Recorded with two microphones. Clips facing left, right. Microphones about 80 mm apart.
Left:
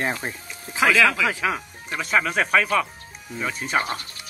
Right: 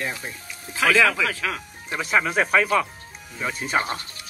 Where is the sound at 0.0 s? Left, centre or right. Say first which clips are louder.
Left 4 dB; left.